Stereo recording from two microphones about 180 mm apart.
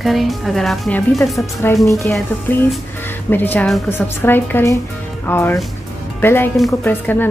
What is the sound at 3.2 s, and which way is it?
A woman's voice, 10° left (ahead or behind).